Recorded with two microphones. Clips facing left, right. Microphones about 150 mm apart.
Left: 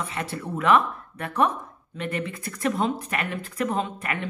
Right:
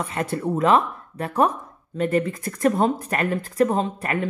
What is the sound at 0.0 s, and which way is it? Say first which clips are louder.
Speech: right 6 dB; 45° right (ahead or behind).